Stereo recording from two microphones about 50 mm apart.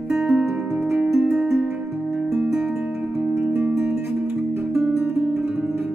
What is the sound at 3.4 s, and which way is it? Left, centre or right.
Music, right.